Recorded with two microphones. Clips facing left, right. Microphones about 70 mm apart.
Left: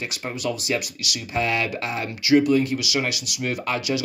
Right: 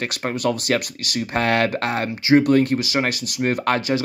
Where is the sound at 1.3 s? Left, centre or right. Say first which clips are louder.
Right 4 dB; right.